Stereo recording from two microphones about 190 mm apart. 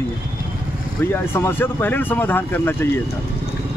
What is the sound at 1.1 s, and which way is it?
Speech, 10° left (ahead or behind).